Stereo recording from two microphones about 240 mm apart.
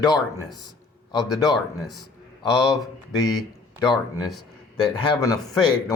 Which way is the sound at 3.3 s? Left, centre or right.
Centre.